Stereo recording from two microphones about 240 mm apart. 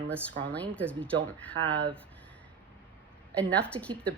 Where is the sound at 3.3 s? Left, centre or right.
Centre.